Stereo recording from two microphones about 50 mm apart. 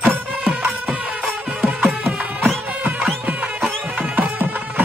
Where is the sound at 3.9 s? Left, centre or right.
Right.